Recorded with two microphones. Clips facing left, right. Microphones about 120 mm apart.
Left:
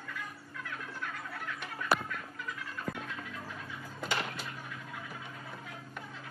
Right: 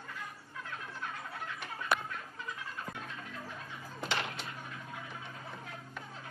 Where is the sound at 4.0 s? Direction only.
5° left (ahead or behind).